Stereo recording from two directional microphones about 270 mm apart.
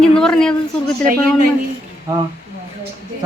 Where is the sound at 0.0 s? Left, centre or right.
Centre.